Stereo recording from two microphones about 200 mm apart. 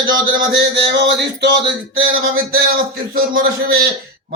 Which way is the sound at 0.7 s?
60° right (ahead or behind).